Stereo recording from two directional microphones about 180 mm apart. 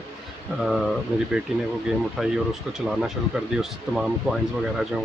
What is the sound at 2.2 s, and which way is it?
Speech, centre (ahead or behind).